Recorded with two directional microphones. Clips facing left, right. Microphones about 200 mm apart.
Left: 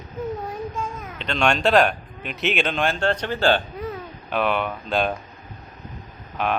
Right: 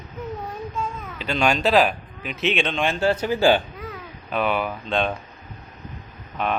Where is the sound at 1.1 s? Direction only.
5° right (ahead or behind).